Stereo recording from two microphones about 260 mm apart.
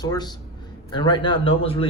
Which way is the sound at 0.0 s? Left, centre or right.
Centre.